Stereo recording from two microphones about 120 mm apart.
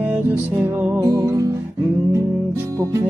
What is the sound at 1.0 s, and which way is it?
Music, 30° right (ahead or behind).